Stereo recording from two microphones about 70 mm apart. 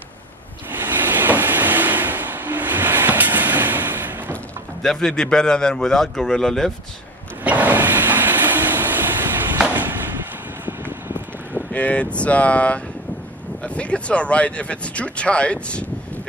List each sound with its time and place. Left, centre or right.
0.7 s vehicle: right
4.8 s speech: centre
7.4 s train: right
10.6 s a sound: right
11.7 s speech: centre